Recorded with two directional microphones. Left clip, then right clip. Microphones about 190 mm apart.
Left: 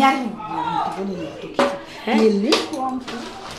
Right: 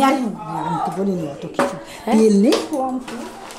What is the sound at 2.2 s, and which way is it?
Speech, 90° right.